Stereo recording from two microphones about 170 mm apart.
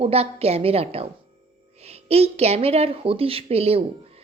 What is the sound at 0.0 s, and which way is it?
A woman's voice, 35° right (ahead or behind).